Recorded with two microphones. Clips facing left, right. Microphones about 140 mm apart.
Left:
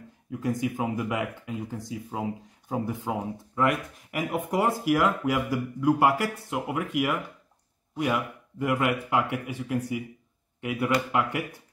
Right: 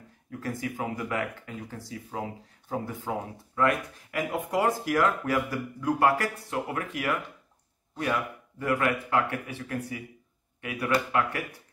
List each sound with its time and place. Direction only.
0.3 s a man's voice: 15° left (ahead or behind)